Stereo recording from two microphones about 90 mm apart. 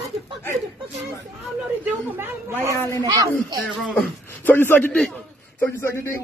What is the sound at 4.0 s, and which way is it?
A man's voice, 20° left (ahead or behind).